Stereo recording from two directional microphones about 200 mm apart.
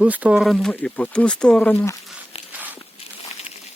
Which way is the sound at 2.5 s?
10° right (ahead or behind).